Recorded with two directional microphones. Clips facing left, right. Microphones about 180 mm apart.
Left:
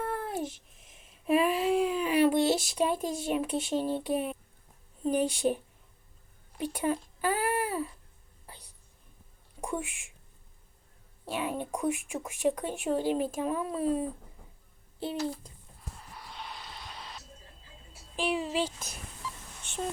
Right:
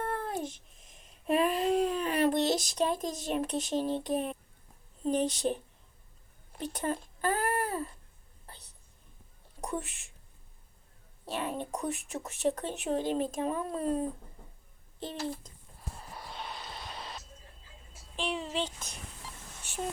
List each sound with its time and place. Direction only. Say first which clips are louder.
0.0 s a sound: left 1 dB; centre (ahead or behind)
5.0 s speech: left 2 dB; 10° left (ahead or behind)
6.6 s speech: left 3 dB; 10° left (ahead or behind)
8.4 s whispering: left 2 dB; 10° left (ahead or behind)
9.6 s speech: left 2 dB; 10° left (ahead or behind)
11.3 s speech: left 2 dB; 10° left (ahead or behind)
16.0 s a sound: right 4 dB; 30° right (ahead or behind)
16.8 s music: right 2 dB; 25° right (ahead or behind)
18.2 s speech: left 4 dB; 10° left (ahead or behind)